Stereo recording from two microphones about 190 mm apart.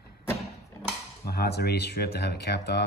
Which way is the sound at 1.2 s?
60° left (ahead or behind).